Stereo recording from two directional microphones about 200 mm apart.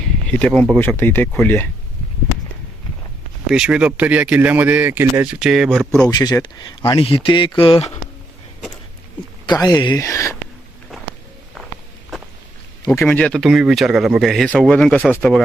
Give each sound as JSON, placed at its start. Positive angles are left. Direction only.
{"t": 0.0, "sound": "speech", "side_deg": 5}
{"t": 3.5, "sound": "speech", "side_deg": -5}
{"t": 6.1, "sound": "speech", "side_deg": 20}
{"t": 9.5, "sound": "speech", "side_deg": 20}
{"t": 10.9, "sound": "walk", "side_deg": 0}
{"t": 12.9, "sound": "speech", "side_deg": 5}